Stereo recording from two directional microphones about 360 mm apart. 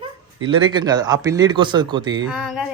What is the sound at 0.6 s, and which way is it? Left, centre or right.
Speech, centre.